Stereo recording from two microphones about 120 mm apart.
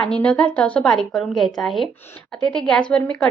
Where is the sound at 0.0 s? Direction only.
10° left (ahead or behind).